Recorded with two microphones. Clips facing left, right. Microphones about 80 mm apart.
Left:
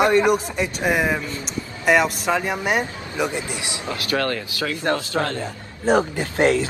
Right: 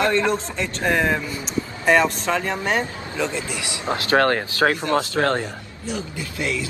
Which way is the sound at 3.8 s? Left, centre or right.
Right.